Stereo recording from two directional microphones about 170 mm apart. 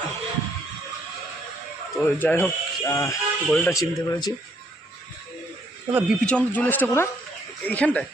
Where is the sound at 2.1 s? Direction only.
10° left (ahead or behind).